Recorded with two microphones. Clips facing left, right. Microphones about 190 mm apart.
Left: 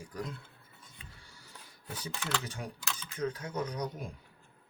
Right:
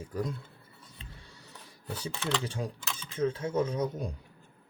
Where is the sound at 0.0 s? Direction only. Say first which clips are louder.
Right 6 dB; 25° right (ahead or behind).